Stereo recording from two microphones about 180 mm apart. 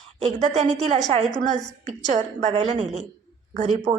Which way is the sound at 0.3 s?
40° right (ahead or behind).